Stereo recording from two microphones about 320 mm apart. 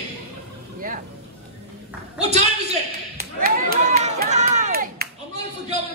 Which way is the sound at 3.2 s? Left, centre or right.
Right.